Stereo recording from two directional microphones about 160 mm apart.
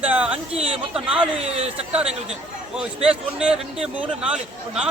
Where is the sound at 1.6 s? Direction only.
40° right (ahead or behind).